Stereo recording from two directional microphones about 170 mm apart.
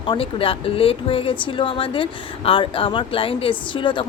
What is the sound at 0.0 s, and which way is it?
Speech, 30° left (ahead or behind).